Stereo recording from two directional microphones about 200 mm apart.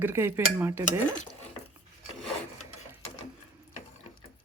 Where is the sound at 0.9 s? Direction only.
35° left (ahead or behind).